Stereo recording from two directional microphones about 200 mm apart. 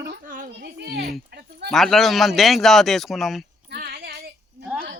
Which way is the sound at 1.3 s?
50° right (ahead or behind).